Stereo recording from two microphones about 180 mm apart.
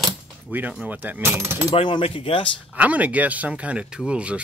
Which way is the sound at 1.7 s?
30° left (ahead or behind).